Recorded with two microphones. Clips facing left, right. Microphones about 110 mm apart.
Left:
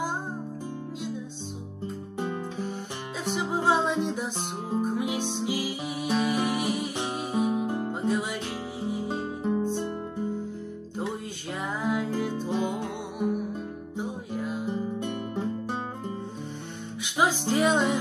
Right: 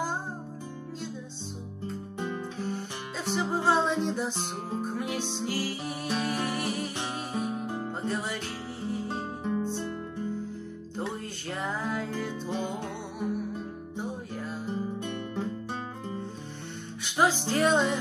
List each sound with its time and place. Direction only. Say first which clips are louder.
3.3 s music: left 1 dB; 10° left (ahead or behind)
11.6 s music: left 4 dB; 10° left (ahead or behind)
15.0 s guitar: left 2 dB; 20° left (ahead or behind)
17.0 s music: even; 5° left (ahead or behind)